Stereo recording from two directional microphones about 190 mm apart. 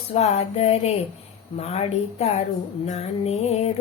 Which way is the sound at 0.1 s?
35° left (ahead or behind).